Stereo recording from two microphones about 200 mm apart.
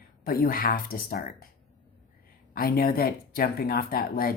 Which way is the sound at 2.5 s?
45° left (ahead or behind).